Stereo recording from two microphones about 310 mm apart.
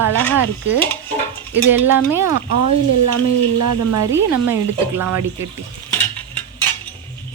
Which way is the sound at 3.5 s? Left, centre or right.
Right.